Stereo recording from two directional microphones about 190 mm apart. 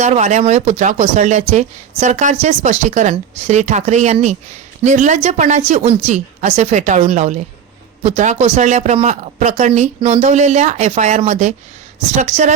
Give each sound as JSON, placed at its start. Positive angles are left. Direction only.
{"t": 0.0, "sound": "speech", "side_deg": -40}